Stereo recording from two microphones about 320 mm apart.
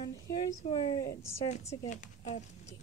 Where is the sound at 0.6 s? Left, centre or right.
Centre.